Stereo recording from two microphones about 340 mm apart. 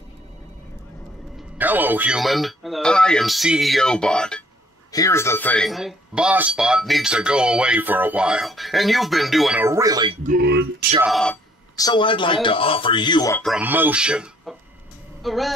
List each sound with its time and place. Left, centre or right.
1.6 s speech: centre
10.2 s speech: right
11.0 s speech: centre